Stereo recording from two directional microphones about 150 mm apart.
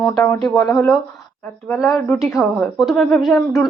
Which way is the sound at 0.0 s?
15° left (ahead or behind).